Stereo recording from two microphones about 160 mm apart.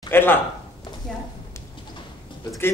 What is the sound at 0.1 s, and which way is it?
Speech, 15° left (ahead or behind).